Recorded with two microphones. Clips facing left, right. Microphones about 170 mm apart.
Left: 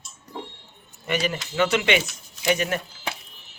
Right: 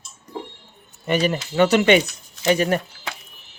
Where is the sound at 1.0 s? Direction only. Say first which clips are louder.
Right 5 dB; 40° right (ahead or behind).